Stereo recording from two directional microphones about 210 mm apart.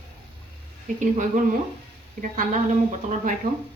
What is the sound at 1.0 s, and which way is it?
Speech, 35° right (ahead or behind).